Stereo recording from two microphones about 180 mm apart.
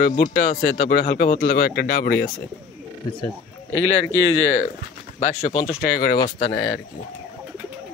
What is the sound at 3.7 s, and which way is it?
Speech, 90° left.